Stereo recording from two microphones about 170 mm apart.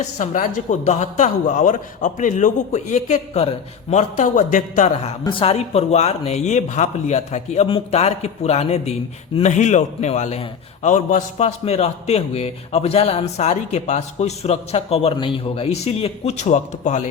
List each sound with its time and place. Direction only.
0.0 s a man's voice: 45° left (ahead or behind)
5.2 s a man's voice: 30° left (ahead or behind)